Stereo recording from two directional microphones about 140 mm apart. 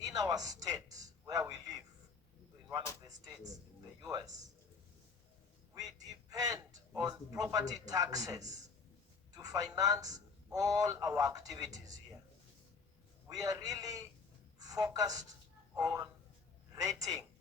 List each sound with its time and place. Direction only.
0.1 s speech: 25° right (ahead or behind)
3.1 s speech: 25° right (ahead or behind)
5.7 s a man's voice: 25° right (ahead or behind)
13.2 s speech: 25° right (ahead or behind)